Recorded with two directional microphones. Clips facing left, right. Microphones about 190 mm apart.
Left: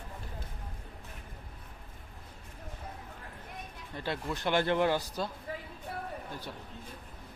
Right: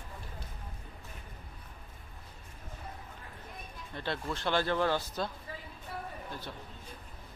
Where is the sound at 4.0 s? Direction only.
10° left (ahead or behind).